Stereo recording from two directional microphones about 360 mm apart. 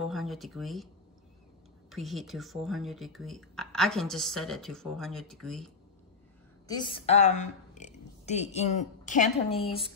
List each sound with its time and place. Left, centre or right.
0.0 s speech: centre
1.9 s speech: centre
6.7 s a woman's voice: centre